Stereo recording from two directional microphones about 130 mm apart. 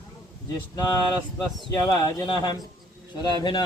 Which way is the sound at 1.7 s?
25° left (ahead or behind).